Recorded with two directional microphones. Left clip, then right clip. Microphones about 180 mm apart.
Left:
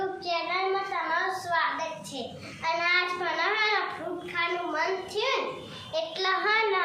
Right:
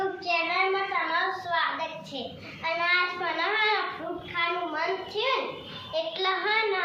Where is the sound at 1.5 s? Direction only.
5° left (ahead or behind).